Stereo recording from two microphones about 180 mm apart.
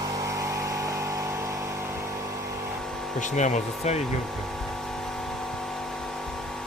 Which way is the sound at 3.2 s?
40° left (ahead or behind).